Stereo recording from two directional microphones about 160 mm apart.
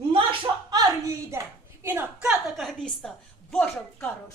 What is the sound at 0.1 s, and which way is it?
Hands, 30° right (ahead or behind).